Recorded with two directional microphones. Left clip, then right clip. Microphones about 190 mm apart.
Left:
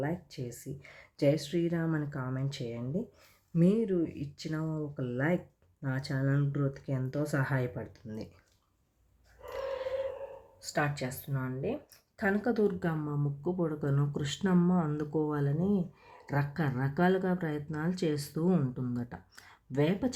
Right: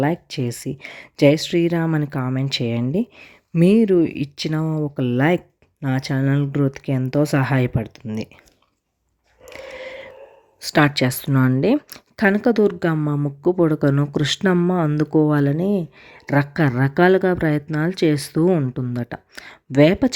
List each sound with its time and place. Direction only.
0.0 s speech: 40° right (ahead or behind)
10.6 s speech: 40° right (ahead or behind)
12.1 s speech: 35° right (ahead or behind)